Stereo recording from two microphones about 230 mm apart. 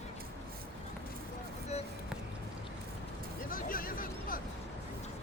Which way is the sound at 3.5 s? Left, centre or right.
Left.